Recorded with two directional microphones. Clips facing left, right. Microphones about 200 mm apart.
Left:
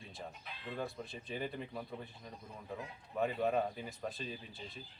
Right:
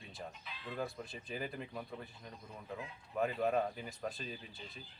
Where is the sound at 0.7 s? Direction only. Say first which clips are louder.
Even; centre (ahead or behind).